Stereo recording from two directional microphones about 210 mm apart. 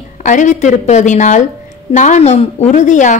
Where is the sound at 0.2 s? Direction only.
35° left (ahead or behind).